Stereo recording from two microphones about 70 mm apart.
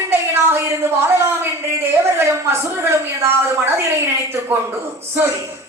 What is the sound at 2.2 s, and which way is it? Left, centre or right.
A man's voice, right.